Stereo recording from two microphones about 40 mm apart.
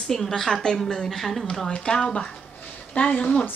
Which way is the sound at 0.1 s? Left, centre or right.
Centre.